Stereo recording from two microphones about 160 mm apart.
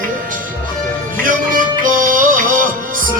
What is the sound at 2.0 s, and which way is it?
Music, 60° right (ahead or behind).